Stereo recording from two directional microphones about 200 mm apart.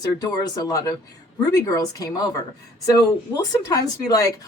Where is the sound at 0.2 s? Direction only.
20° left (ahead or behind).